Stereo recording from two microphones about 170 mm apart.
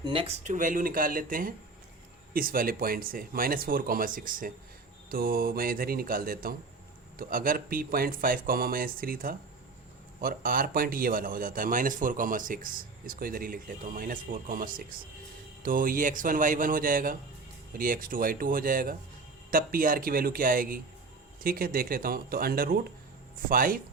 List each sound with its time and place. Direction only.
0.0 s speech: 30° right (ahead or behind)
0.4 s a man's voice: 50° right (ahead or behind)